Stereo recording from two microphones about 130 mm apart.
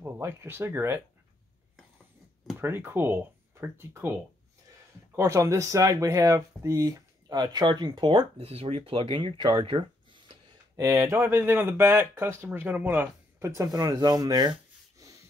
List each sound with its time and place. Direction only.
0.0 s speech: 20° right (ahead or behind)
2.6 s speech: 15° right (ahead or behind)
5.1 s speech: 20° right (ahead or behind)
8.5 s speech: 50° right (ahead or behind)
10.8 s speech: 25° right (ahead or behind)
13.6 s speech: 25° right (ahead or behind)
15.0 s snort: 25° right (ahead or behind)